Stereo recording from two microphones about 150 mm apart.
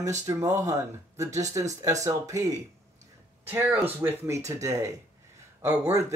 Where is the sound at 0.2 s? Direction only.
20° right (ahead or behind).